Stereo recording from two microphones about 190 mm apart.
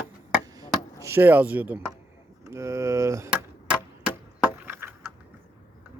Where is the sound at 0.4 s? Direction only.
20° right (ahead or behind).